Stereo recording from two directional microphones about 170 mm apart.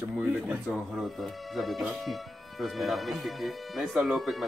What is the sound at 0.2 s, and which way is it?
Speech, 10° right (ahead or behind).